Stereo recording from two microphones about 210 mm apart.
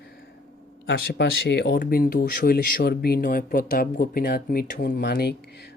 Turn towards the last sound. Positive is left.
turn(degrees=45)  # may be behind; listen again after turning